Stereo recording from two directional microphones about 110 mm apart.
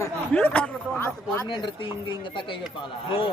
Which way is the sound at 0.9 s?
20° left (ahead or behind).